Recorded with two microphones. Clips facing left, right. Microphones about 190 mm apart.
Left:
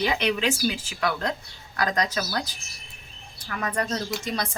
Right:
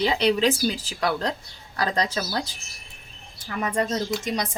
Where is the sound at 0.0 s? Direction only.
30° right (ahead or behind).